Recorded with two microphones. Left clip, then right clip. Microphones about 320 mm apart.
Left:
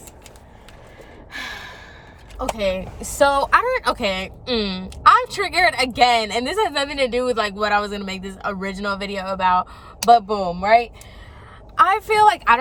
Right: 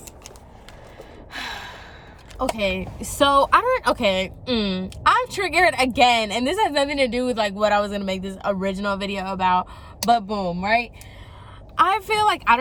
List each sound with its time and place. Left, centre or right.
1.3 s gasp: centre
2.4 s a woman's voice: centre